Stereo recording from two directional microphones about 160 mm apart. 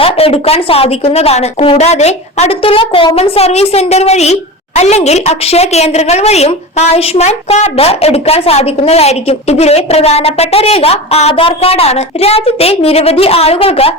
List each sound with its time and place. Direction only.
0.0 s a woman's voice: 35° left (ahead or behind)